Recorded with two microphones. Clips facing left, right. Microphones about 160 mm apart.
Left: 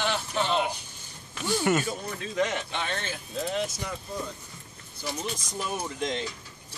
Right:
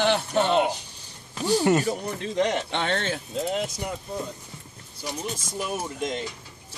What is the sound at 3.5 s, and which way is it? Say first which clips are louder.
Speech: right 1 dB; 20° right (ahead or behind).